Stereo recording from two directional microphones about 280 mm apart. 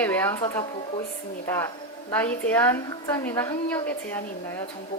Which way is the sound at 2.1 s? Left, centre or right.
Centre.